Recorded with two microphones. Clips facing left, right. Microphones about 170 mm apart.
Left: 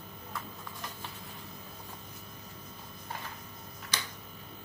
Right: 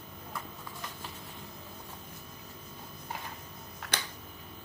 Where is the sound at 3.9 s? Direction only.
60° right (ahead or behind).